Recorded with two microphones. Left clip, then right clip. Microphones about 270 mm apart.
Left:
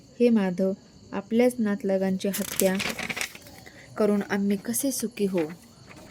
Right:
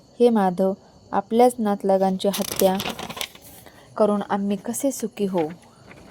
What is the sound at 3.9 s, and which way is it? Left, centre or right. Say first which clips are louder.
Speech: right 5 dB; centre.